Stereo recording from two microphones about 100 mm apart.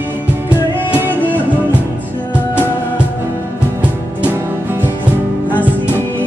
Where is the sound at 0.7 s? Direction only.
20° right (ahead or behind).